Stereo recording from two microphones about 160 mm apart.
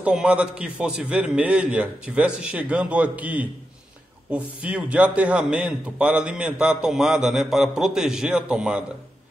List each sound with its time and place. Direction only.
0.0 s a man's voice: 5° right (ahead or behind)